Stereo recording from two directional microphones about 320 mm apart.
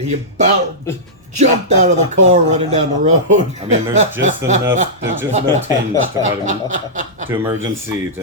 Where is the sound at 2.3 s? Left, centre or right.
Centre.